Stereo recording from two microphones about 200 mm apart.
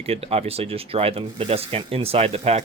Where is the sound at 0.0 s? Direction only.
30° right (ahead or behind).